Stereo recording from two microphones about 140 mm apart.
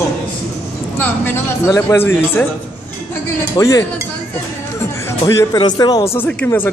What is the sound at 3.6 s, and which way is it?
Speech, 25° left (ahead or behind).